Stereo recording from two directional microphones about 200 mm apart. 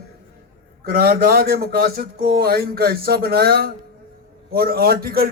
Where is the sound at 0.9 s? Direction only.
50° right (ahead or behind).